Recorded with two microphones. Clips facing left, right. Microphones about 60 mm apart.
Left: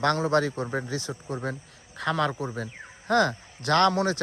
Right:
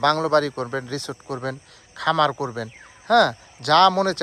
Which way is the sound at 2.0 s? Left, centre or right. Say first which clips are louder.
Right 6 dB; right.